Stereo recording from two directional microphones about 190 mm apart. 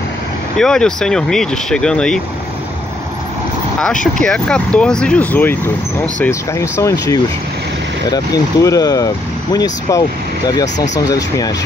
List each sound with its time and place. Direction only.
0.6 s speech: 5° left (ahead or behind)
3.8 s speech: 5° left (ahead or behind)